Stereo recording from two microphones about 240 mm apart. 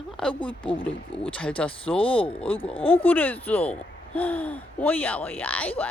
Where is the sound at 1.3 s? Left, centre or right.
Centre.